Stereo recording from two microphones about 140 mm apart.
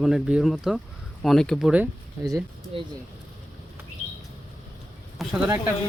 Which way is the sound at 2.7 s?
40° right (ahead or behind).